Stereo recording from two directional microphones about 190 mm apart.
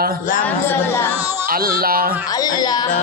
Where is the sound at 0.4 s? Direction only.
10° left (ahead or behind).